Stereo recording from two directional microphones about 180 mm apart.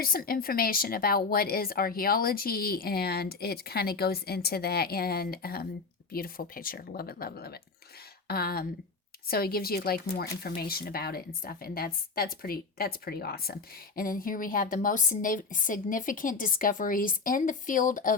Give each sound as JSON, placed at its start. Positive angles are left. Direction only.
{"t": 0.0, "sound": "a woman's voice", "side_deg": 55}